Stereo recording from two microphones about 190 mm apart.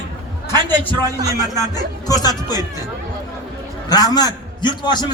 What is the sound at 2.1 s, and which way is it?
Speech, 20° left (ahead or behind).